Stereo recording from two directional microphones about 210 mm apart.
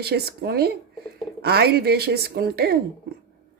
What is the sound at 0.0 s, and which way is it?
Speech, 50° right (ahead or behind).